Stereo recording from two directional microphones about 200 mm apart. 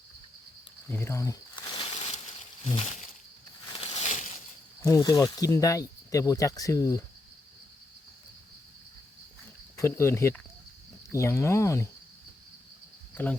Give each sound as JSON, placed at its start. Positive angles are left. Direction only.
{"t": 0.9, "sound": "cricket", "side_deg": 10}
{"t": 1.8, "sound": "crushing", "side_deg": 30}
{"t": 2.6, "sound": "a sound", "side_deg": 30}
{"t": 4.8, "sound": "speech", "side_deg": 15}
{"t": 9.7, "sound": "speech", "side_deg": 15}